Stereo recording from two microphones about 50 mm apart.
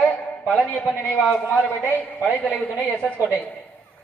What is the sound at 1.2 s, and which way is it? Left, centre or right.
Speech, centre.